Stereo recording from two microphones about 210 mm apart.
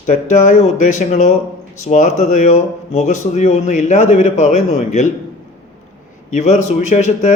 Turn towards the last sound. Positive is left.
turn(degrees=35)  # may be behind; listen again after turning